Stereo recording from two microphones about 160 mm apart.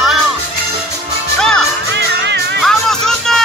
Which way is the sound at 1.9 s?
90° right.